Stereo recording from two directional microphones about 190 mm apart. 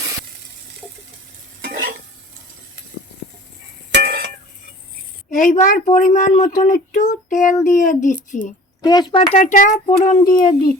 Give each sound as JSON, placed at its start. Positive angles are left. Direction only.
{"t": 1.6, "sound": "stir", "side_deg": -50}
{"t": 3.9, "sound": "a sound", "side_deg": -60}
{"t": 5.3, "sound": "speech", "side_deg": 40}
{"t": 8.8, "sound": "a child's voice", "side_deg": 20}